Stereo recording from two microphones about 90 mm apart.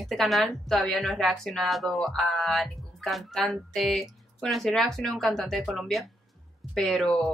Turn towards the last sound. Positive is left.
turn(degrees=0)  # may be behind; listen again after turning